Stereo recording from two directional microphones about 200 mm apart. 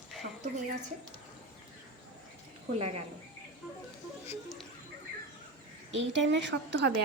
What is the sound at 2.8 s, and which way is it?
Speech, 30° right (ahead or behind).